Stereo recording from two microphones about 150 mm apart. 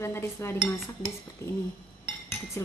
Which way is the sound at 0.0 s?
15° left (ahead or behind).